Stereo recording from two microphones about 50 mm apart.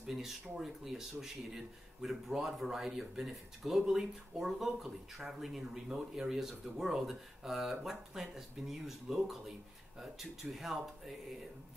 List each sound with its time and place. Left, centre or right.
0.0 s speech: centre